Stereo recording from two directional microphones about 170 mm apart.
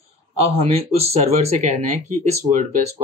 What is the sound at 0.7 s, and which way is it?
Speech, 35° right (ahead or behind).